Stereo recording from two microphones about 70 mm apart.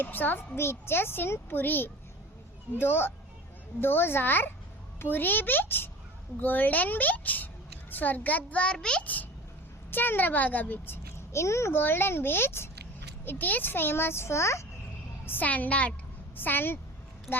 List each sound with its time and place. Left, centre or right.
0.0 s a woman's voice: left
9.9 s a child's voice: left
11.8 s a woman's voice: left
15.3 s a child's voice: left
17.3 s speech: centre